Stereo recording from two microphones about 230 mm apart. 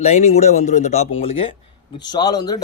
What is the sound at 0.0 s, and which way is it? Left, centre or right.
Speech, left.